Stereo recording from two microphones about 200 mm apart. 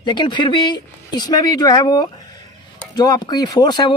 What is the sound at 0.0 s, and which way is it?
Speech, 20° left (ahead or behind).